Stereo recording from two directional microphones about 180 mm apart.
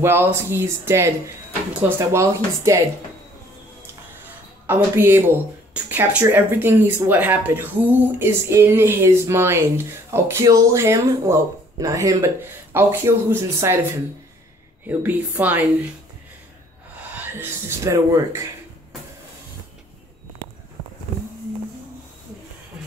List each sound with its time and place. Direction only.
0.0 s speech: 15° right (ahead or behind)
4.6 s speech: 10° right (ahead or behind)
14.9 s speech: 10° right (ahead or behind)
17.1 s speech: 10° right (ahead or behind)